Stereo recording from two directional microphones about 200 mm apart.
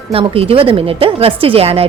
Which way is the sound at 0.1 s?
30° right (ahead or behind).